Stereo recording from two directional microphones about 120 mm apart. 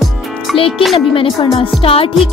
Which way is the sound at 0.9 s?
50° left (ahead or behind).